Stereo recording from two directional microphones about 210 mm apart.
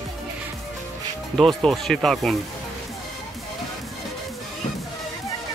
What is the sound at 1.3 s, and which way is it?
Speech, centre (ahead or behind).